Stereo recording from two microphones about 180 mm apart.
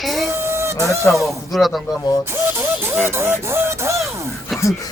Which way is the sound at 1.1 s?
Centre (ahead or behind).